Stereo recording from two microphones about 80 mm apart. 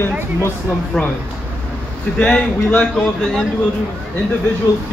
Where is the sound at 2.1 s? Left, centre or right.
Centre.